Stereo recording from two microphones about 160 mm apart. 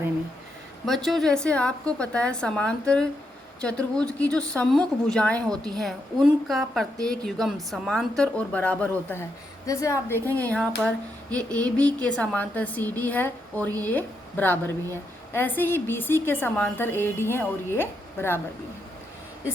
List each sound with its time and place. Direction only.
0.9 s a woman's voice: centre (ahead or behind); by 10.0 s 20° left (ahead or behind)
10.1 s a woman's voice: 15° right (ahead or behind)
10.8 s a woman's voice: 5° left (ahead or behind)